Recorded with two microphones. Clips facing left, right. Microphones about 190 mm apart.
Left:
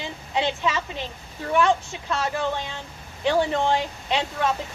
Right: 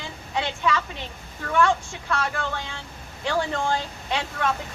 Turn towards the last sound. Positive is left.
turn(degrees=20)  # may be behind; listen again after turning